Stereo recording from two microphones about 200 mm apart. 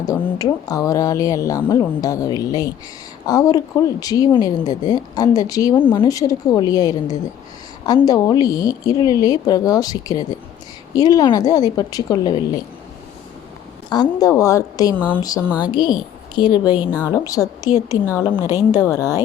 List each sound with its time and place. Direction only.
0.0 s speech: 15° left (ahead or behind)
13.9 s speech: 20° left (ahead or behind)